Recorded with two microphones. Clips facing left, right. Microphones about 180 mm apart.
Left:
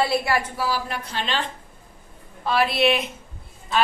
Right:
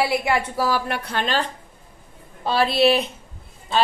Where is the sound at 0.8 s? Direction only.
65° right (ahead or behind).